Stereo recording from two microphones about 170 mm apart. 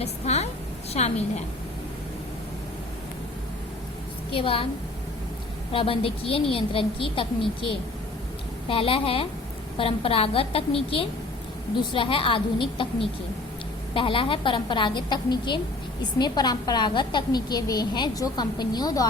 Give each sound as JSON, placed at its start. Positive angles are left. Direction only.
{"t": 0.0, "sound": "a woman's voice", "side_deg": 40}
{"t": 4.3, "sound": "a woman's voice", "side_deg": 30}
{"t": 5.7, "sound": "a woman's voice", "side_deg": 35}
{"t": 8.6, "sound": "a woman's voice", "side_deg": 30}